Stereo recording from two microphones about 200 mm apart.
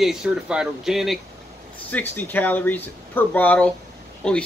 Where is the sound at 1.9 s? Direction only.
10° left (ahead or behind).